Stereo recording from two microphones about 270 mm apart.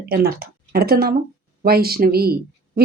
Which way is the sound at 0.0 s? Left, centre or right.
Right.